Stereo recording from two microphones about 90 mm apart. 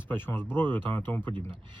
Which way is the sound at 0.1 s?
25° left (ahead or behind).